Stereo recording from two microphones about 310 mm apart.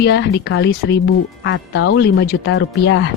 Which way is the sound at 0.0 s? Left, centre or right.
Left.